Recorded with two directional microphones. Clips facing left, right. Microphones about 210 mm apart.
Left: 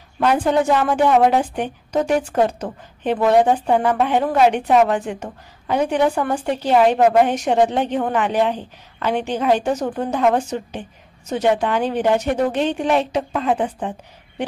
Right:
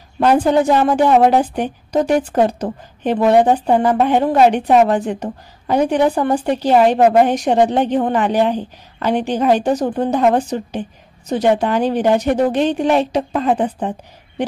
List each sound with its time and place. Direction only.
0.2 s a woman's voice: 35° right (ahead or behind)